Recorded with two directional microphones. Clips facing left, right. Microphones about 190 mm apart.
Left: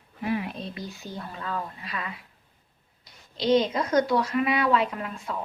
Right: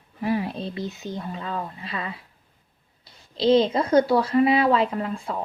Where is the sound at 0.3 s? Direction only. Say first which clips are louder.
Right 4 dB; 35° right (ahead or behind).